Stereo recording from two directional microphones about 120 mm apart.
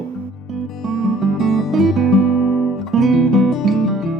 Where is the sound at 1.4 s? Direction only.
Centre (ahead or behind).